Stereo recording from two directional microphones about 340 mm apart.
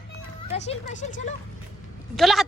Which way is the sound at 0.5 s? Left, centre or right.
Centre.